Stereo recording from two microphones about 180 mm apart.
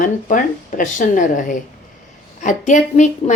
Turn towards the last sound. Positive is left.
turn(degrees=40)  # may be behind; listen again after turning